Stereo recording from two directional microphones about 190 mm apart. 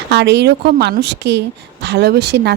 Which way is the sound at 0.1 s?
65° right (ahead or behind).